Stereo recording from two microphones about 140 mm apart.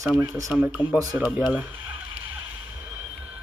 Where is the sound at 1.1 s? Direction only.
10° right (ahead or behind).